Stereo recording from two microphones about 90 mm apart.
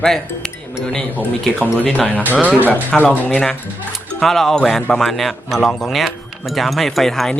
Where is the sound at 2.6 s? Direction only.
20° left (ahead or behind).